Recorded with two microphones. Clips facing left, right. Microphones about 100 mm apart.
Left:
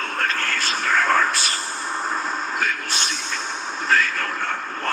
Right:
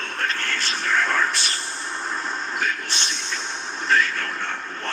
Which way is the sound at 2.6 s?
45° left (ahead or behind).